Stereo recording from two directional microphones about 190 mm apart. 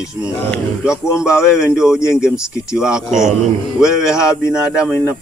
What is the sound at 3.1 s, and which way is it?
Speech, 40° right (ahead or behind).